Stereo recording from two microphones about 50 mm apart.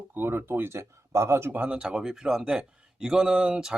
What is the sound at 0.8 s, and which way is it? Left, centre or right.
Speech, right.